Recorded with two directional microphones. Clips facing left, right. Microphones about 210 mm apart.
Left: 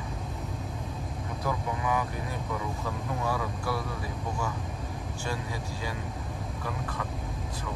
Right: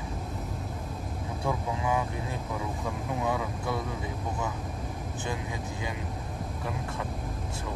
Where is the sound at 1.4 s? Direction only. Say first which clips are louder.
Right 1 dB; 30° right (ahead or behind).